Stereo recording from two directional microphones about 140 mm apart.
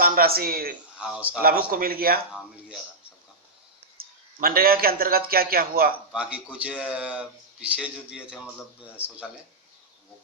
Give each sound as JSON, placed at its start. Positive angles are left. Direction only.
{"t": 0.0, "sound": "a man's voice", "side_deg": -90}
{"t": 0.9, "sound": "speech", "side_deg": -5}
{"t": 1.4, "sound": "speech", "side_deg": -90}
{"t": 3.9, "sound": "a man's voice", "side_deg": -90}
{"t": 6.1, "sound": "speech", "side_deg": -10}